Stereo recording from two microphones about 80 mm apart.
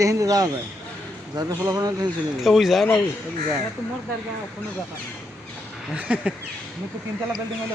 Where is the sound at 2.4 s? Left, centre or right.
Centre.